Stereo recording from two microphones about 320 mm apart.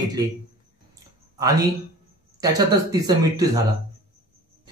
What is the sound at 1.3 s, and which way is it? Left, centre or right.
Speech, centre.